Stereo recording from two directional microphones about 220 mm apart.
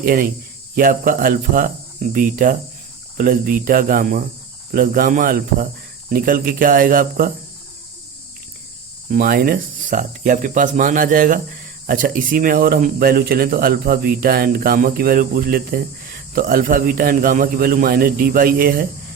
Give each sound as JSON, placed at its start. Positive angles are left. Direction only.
{"t": 0.0, "sound": "speech", "side_deg": -40}
{"t": 9.0, "sound": "speech", "side_deg": -40}